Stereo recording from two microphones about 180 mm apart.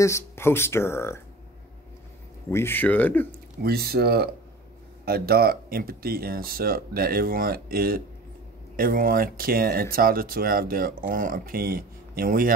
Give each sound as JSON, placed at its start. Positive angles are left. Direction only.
{"t": 0.0, "sound": "speech", "side_deg": 15}
{"t": 2.5, "sound": "speech", "side_deg": 10}
{"t": 3.3, "sound": "speech", "side_deg": -60}